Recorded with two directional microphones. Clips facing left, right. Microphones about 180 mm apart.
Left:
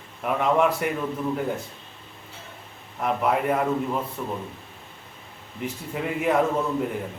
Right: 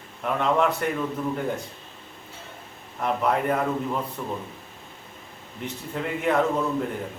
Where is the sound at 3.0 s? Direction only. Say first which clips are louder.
Even; 5° left (ahead or behind).